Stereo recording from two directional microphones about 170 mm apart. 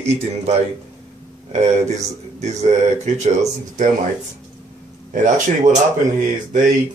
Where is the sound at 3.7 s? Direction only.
45° right (ahead or behind).